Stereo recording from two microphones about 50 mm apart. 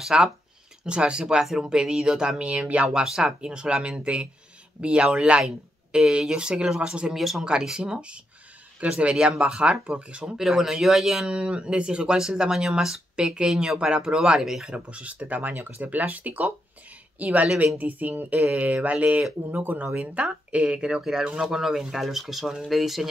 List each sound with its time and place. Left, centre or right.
0.0 s speech: centre
0.8 s speech: centre
7.2 s speech: centre
7.4 s speech: centre
10.2 s a woman's voice: centre
14.9 s speech: right; by 23.0 s centre